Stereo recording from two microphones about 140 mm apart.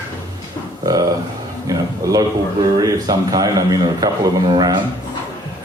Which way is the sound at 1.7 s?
25° right (ahead or behind).